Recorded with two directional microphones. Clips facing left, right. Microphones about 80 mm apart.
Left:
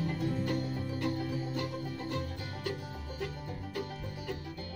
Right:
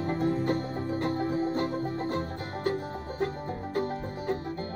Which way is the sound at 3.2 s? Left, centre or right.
Right.